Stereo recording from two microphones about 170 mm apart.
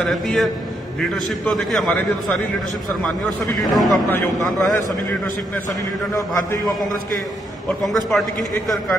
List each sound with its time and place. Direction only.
0.0 s a man's voice: centre (ahead or behind)
3.7 s a man's voice: centre (ahead or behind)
6.1 s a man's voice: 20° left (ahead or behind)
7.8 s a man's voice: centre (ahead or behind)